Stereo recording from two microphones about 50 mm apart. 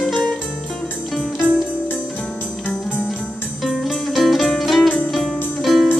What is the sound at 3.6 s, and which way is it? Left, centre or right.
Music, centre.